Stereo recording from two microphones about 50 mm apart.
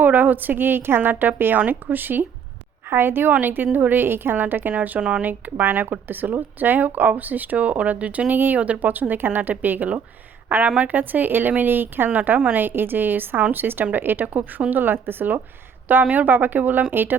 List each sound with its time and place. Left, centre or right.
0.0 s a woman's voice: right
4.9 s speech: centre
5.2 s speech: right
12.0 s a woman's voice: right